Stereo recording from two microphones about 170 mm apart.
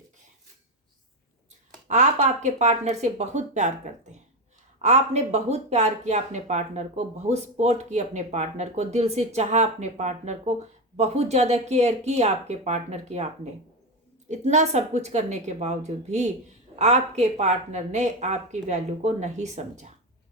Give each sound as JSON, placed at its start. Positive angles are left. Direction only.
{"t": 1.9, "sound": "speech", "side_deg": -45}
{"t": 4.8, "sound": "speech", "side_deg": -40}